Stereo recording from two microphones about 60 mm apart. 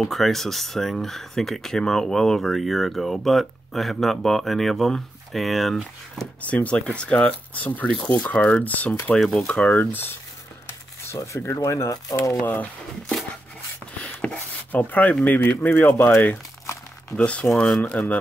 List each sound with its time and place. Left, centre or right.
0.1 s speech: centre
6.4 s speech: left
9.2 s speech: centre
9.5 s speech: centre
9.8 s speech: left
11.4 s speech: left
14.2 s a sound: left
15.2 s speech: left
17.2 s speech: left
17.5 s speech: centre
17.8 s speech: left